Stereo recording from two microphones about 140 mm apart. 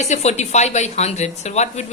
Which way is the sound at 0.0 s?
55° left (ahead or behind).